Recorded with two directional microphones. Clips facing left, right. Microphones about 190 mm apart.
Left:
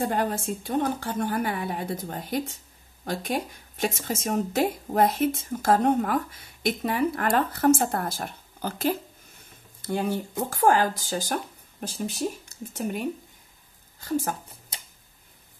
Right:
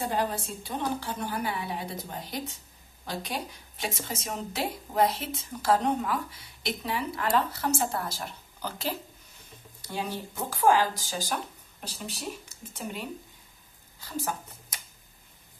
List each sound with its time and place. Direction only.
0.0 s a woman's voice: 50° left (ahead or behind)